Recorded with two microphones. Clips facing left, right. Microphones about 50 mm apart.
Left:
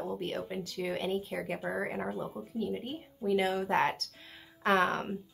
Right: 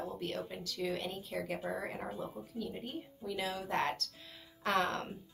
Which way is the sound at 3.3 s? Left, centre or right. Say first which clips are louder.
Left 7 dB; left.